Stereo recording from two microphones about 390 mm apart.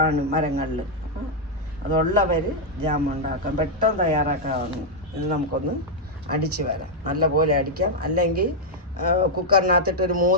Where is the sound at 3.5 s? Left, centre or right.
Centre.